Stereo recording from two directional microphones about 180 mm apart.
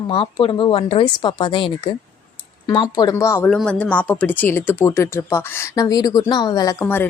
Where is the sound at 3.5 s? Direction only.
5° left (ahead or behind).